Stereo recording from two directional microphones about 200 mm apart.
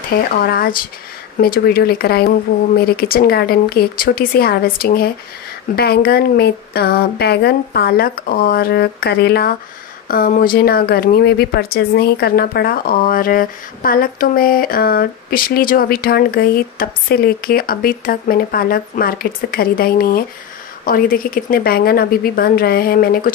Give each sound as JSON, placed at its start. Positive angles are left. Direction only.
{"t": 0.4, "sound": "speech", "side_deg": 50}